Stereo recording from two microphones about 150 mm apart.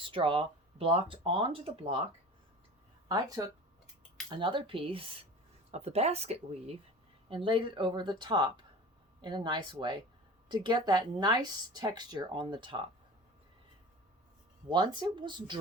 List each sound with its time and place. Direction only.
0.0 s speech: 35° right (ahead or behind)
3.1 s speech: 25° right (ahead or behind); by 6.7 s 45° right (ahead or behind)
7.4 s speech: 35° right (ahead or behind)
14.7 s speech: 30° right (ahead or behind)